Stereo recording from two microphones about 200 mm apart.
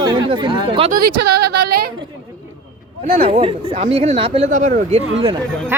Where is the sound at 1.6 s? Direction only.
50° right (ahead or behind).